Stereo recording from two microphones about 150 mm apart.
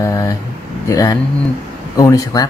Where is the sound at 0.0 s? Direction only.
20° left (ahead or behind).